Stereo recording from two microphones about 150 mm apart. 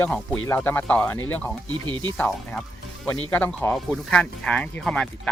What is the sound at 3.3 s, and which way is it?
Speech, 10° left (ahead or behind).